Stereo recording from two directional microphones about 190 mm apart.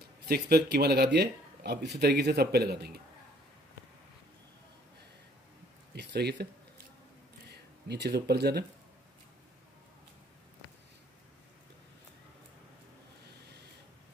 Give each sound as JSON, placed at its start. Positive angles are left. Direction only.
{"t": 0.3, "sound": "speech", "side_deg": -55}
{"t": 5.9, "sound": "speech", "side_deg": -60}
{"t": 7.9, "sound": "speech", "side_deg": -60}